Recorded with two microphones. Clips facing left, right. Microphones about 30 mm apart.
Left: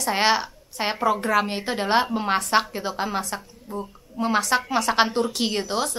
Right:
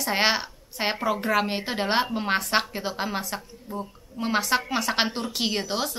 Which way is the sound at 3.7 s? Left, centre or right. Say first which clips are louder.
Left 2 dB; centre.